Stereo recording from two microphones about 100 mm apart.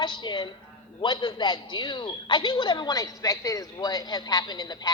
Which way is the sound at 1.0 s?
45° left (ahead or behind).